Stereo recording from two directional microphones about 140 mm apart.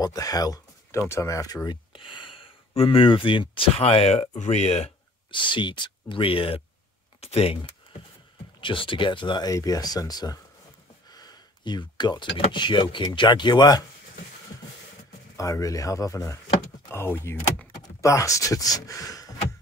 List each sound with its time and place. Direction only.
0.0 s speech: 25° left (ahead or behind); by 4.9 s 50° left (ahead or behind)
5.3 s speech: 35° left (ahead or behind)
8.5 s speech: 35° left (ahead or behind)
11.1 s a sound: 30° left (ahead or behind)
12.5 s speech: 35° left (ahead or behind)
15.3 s speech: 25° left (ahead or behind)